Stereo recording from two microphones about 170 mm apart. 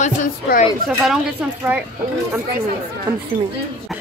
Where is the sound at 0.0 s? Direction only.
45° left (ahead or behind).